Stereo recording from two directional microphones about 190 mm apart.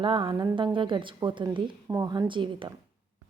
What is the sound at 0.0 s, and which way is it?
A woman's voice, 25° right (ahead or behind).